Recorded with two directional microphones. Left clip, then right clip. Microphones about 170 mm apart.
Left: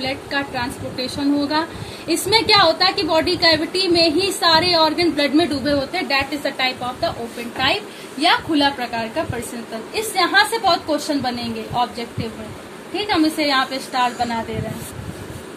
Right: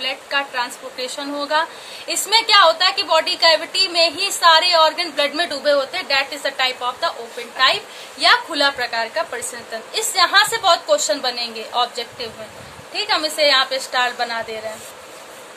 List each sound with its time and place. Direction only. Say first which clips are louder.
0.0 s a woman's voice: right 1 dB; 45° right (ahead or behind); by 13.7 s 60° right (ahead or behind)